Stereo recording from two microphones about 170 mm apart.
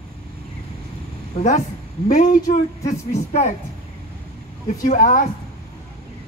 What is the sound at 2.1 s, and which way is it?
Speech, 45° left (ahead or behind).